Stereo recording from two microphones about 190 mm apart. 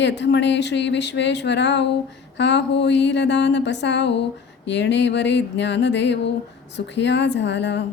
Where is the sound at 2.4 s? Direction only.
65° left (ahead or behind).